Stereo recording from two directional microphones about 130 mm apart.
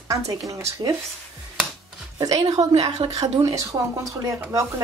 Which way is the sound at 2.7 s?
55° right (ahead or behind).